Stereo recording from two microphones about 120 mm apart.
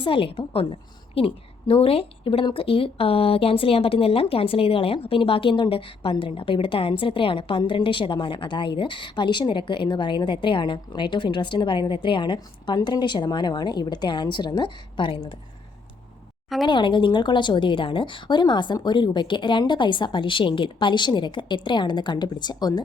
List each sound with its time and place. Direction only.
0.0 s a woman's voice: 45° left (ahead or behind)
16.6 s a woman's voice: 40° left (ahead or behind)